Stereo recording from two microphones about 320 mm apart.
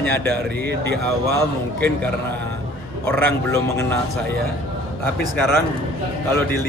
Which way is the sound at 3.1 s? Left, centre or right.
Centre.